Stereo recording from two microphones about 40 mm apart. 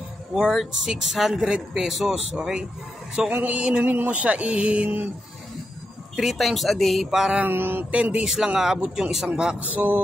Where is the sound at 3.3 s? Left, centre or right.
Right.